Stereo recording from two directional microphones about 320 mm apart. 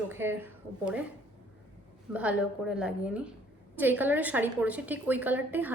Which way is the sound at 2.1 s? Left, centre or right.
Centre.